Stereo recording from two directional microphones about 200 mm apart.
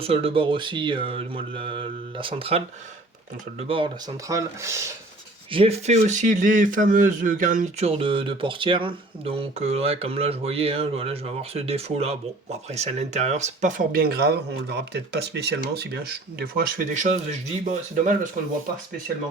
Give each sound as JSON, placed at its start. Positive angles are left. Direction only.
{"t": 0.0, "sound": "speech", "side_deg": -30}
{"t": 5.5, "sound": "speech", "side_deg": -30}